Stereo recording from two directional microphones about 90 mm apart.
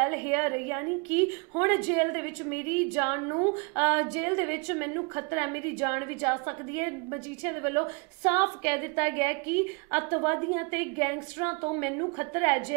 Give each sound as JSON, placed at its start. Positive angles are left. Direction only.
{"t": 0.0, "sound": "a woman's voice", "side_deg": -20}